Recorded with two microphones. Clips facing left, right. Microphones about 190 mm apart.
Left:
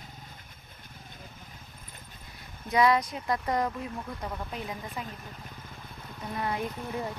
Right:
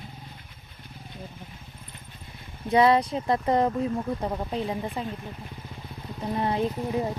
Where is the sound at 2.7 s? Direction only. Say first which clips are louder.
Right 4 dB; 30° right (ahead or behind).